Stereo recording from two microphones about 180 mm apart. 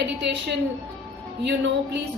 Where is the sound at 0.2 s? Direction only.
70° right (ahead or behind).